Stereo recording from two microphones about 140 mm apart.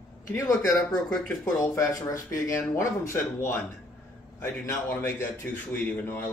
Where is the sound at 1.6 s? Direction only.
20° left (ahead or behind).